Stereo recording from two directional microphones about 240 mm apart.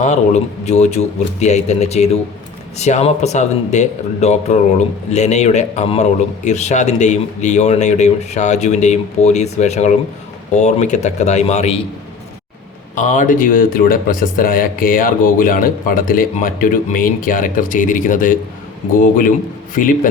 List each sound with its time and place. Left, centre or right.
0.0 s speech: left
13.0 s speech: left